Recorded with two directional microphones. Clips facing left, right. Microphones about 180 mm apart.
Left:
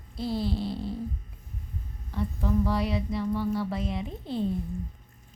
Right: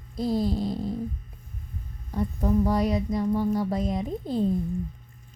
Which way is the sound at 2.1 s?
45° right (ahead or behind).